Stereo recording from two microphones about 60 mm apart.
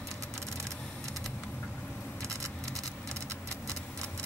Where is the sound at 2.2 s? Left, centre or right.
Right.